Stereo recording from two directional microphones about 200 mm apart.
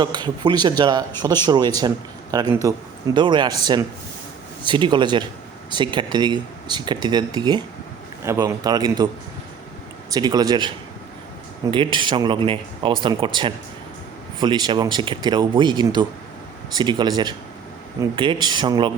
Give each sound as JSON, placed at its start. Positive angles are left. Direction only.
{"t": 0.0, "sound": "a man's voice", "side_deg": -20}
{"t": 10.1, "sound": "speech", "side_deg": -20}
{"t": 11.7, "sound": "speech", "side_deg": -25}